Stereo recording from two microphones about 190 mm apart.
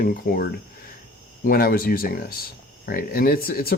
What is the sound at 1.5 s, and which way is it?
Speech, 50° left (ahead or behind).